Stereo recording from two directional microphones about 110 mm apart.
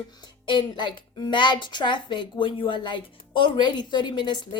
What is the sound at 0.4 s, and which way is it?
A woman's voice, 45° left (ahead or behind).